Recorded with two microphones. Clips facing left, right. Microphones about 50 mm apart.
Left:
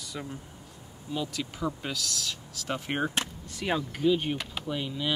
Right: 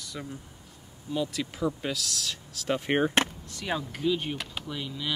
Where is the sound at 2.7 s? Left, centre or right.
Right.